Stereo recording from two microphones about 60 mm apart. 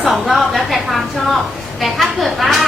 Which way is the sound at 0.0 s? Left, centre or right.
Centre.